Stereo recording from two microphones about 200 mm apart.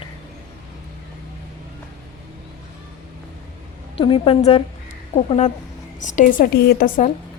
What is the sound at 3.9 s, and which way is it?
A woman's voice, 25° left (ahead or behind).